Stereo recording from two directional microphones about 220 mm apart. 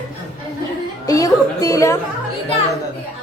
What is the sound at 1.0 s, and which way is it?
Speech, 15° left (ahead or behind).